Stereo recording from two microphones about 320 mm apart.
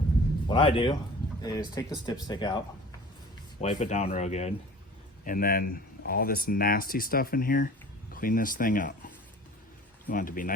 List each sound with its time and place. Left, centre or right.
0.4 s a man's voice: centre
3.6 s speech: centre